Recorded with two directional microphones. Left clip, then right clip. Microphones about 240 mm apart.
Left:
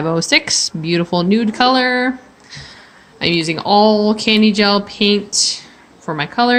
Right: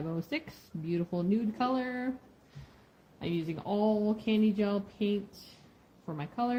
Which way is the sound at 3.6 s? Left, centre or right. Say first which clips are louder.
Left 19 dB; left.